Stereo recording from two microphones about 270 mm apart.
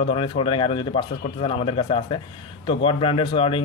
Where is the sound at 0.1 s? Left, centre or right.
Centre.